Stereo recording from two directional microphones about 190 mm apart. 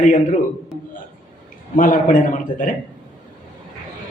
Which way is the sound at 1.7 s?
45° left (ahead or behind).